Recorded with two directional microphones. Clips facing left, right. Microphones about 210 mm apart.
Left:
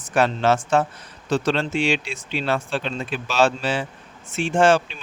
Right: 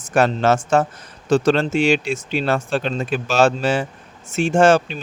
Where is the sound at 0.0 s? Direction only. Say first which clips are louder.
Right 3 dB; 45° right (ahead or behind).